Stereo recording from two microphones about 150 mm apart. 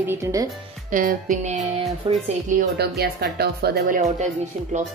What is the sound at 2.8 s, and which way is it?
Speech, 90° right.